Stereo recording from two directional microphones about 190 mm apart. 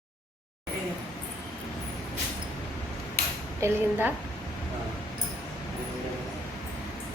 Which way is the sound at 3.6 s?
15° right (ahead or behind).